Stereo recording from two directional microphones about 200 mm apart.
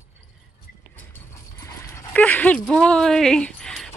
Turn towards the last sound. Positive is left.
turn(degrees=0)  # may be behind; listen again after turning